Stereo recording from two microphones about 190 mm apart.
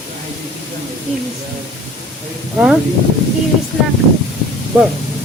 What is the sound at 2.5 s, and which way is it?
Speech, 5° right (ahead or behind).